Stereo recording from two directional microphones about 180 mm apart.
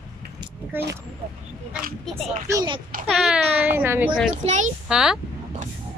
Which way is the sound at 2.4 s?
20° right (ahead or behind).